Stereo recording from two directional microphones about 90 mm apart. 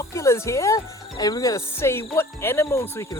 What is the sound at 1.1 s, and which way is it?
Speech, 45° left (ahead or behind).